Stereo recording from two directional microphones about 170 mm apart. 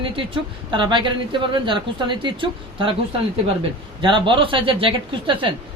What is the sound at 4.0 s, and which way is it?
Speech, 30° right (ahead or behind).